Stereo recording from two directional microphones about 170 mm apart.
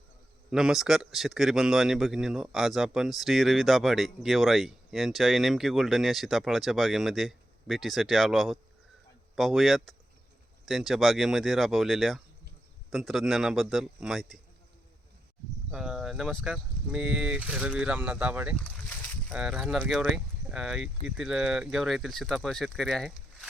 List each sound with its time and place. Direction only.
0.5 s a man's voice: 5° right (ahead or behind)
15.7 s a man's voice: 5° right (ahead or behind)
18.5 s a sound: 10° left (ahead or behind)
19.3 s a man's voice: 5° right (ahead or behind)